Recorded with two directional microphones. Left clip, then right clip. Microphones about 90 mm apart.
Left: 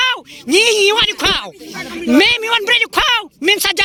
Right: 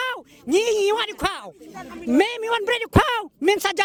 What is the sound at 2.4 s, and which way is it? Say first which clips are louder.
Speech: left 9 dB; 90° right.